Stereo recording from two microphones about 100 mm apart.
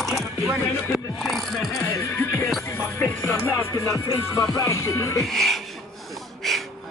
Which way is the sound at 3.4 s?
25° left (ahead or behind).